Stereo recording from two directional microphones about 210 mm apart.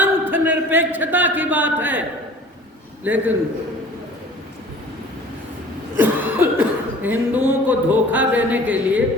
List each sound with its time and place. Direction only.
0.0 s a man's voice: 10° right (ahead or behind)
6.0 s speech: 10° right (ahead or behind)